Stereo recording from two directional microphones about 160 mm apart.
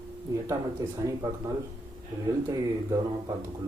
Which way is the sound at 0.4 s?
20° right (ahead or behind).